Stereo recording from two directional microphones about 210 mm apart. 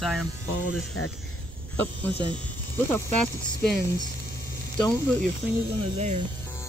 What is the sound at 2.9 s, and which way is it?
Speech, 5° left (ahead or behind).